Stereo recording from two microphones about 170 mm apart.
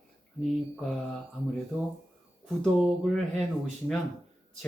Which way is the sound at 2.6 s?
5° left (ahead or behind).